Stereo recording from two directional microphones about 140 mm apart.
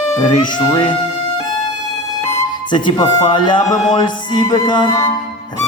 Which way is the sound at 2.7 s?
35° left (ahead or behind).